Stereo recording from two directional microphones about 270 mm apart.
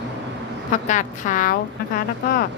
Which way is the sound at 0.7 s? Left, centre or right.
Left.